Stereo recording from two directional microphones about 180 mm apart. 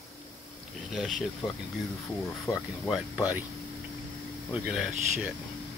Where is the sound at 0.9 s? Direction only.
Centre (ahead or behind).